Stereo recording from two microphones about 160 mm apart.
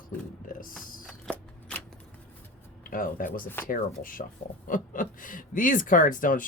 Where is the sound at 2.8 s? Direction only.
60° left (ahead or behind).